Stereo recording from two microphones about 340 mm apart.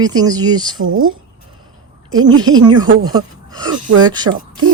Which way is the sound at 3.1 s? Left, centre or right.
Centre.